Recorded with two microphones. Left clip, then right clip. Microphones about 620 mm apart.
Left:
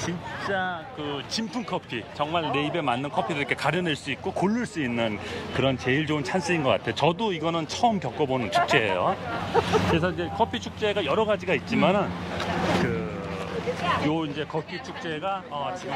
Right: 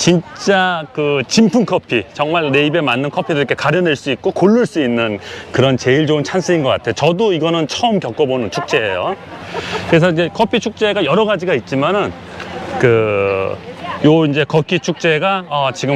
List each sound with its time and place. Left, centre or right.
0.5 s speech: right
2.3 s speech: right
12.8 s speech: right
14.1 s speech: right